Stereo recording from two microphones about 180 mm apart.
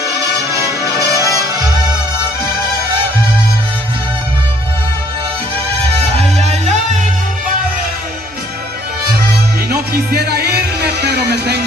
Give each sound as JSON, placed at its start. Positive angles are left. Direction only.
{"t": 0.0, "sound": "music", "side_deg": -15}
{"t": 10.1, "sound": "music", "side_deg": -60}